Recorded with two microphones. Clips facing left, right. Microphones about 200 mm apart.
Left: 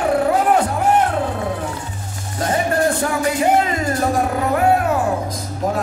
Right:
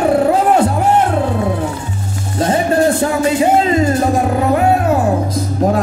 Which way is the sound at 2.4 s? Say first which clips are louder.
Right 5 dB; 25° right (ahead or behind).